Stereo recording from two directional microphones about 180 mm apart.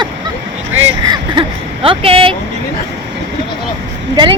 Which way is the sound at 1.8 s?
30° right (ahead or behind).